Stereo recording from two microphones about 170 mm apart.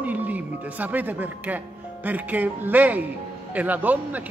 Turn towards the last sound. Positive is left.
turn(degrees=-10)  # may be behind; listen again after turning